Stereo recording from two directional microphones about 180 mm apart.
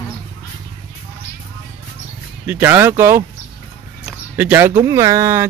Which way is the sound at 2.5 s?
10° right (ahead or behind).